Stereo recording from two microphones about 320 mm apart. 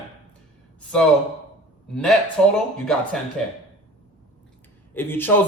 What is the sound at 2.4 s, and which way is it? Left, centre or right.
Speech, centre.